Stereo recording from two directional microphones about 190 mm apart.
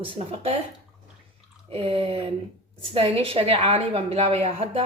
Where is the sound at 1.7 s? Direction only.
30° right (ahead or behind).